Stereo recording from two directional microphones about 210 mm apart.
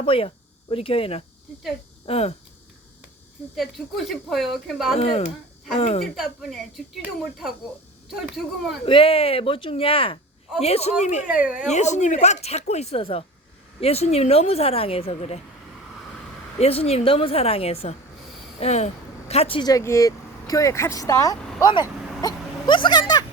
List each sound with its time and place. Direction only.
0.0 s a woman's voice: 25° left (ahead or behind)
3.5 s speech: centre (ahead or behind)
4.9 s a woman's voice: 30° left (ahead or behind)
6.1 s speech: centre (ahead or behind)
8.8 s a woman's voice: 25° left (ahead or behind)
11.3 s speech: 5° right (ahead or behind)
11.7 s a woman's voice: 35° left (ahead or behind)
16.6 s a woman's voice: 30° left (ahead or behind)